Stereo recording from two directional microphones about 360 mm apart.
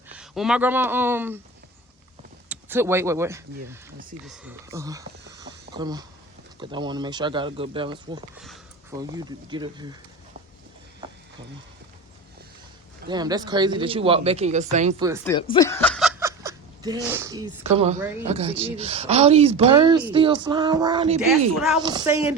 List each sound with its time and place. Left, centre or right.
0.1 s speech: centre
2.5 s a woman's voice: centre
13.1 s a woman's voice: centre
15.2 s a woman's voice: centre